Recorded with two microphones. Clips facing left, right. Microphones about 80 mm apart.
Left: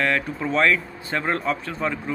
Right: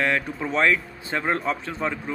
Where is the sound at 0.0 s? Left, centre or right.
Centre.